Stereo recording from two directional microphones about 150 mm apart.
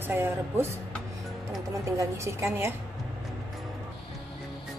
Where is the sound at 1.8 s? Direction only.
20° right (ahead or behind).